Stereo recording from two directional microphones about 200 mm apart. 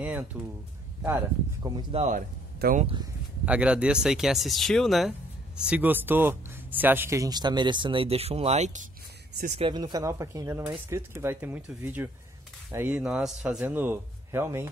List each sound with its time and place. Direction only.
0.0 s speech: 5° right (ahead or behind)
1.8 s speech: 30° right (ahead or behind)
3.4 s speech: 5° right (ahead or behind); by 8.8 s 35° right (ahead or behind)
9.6 s speech: 20° right (ahead or behind)